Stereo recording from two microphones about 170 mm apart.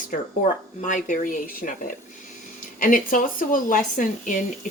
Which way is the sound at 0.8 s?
45° left (ahead or behind).